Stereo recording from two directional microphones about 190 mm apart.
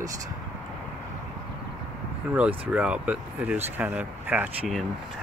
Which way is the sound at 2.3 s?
10° right (ahead or behind).